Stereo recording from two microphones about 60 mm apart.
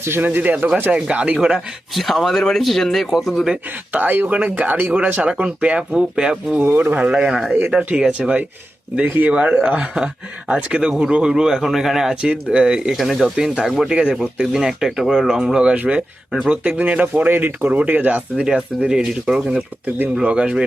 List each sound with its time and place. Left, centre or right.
0.2 s speech: right
1.9 s speech: centre
3.9 s speech: right; by 6.6 s centre
6.6 s speech: right
7.0 s speech: centre
12.2 s speech: centre
13.2 s speech: centre
13.7 s speech: centre
13.9 s speech: centre
18.4 s speech: centre